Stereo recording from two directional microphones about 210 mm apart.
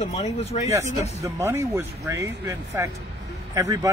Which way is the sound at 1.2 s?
15° right (ahead or behind).